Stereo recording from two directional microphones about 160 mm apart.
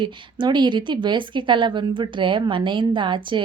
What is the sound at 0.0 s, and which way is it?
Speech, 30° right (ahead or behind).